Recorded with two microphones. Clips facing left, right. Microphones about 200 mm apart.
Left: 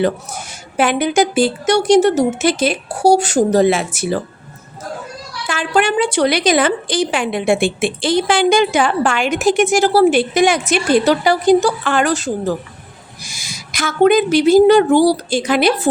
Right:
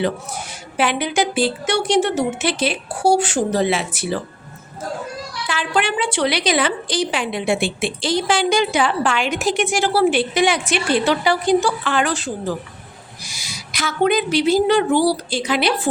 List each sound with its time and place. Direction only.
0.8 s a woman's voice: 45° left (ahead or behind)
5.5 s a woman's voice: 45° left (ahead or behind)